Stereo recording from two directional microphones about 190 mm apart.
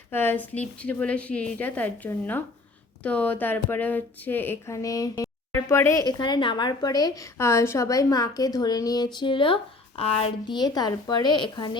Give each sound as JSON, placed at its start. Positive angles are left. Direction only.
{"t": 0.1, "sound": "a woman's voice", "side_deg": 10}